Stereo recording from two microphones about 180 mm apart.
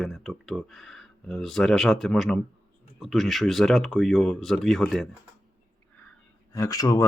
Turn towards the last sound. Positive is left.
turn(degrees=20)  # may be behind; listen again after turning